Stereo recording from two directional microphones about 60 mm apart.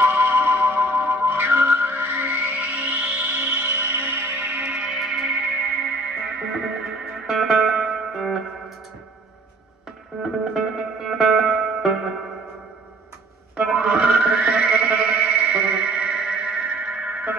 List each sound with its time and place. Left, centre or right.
0.0 s music: right
4.6 s music: centre
10.2 s music: centre
13.6 s music: centre; by 17.3 s right